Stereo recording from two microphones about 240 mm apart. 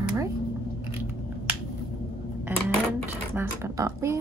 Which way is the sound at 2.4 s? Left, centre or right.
Centre.